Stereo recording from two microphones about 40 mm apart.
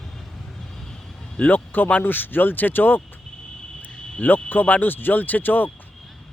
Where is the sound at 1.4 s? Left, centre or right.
Left.